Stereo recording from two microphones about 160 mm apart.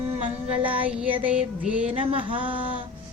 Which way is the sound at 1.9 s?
35° right (ahead or behind).